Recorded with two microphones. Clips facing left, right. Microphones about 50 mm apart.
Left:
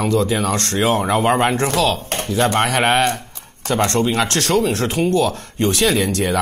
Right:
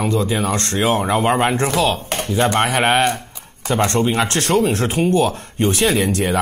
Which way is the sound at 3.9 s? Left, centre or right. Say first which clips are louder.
Even; centre.